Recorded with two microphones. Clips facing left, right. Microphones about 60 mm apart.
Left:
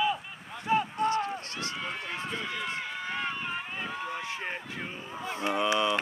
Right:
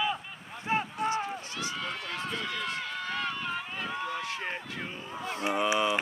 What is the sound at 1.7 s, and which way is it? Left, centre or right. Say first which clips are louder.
Run: even; centre.